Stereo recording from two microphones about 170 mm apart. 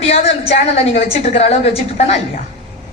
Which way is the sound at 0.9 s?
40° left (ahead or behind).